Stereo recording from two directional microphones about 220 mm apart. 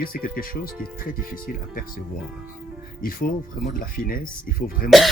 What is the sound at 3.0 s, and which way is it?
Speech, 40° left (ahead or behind).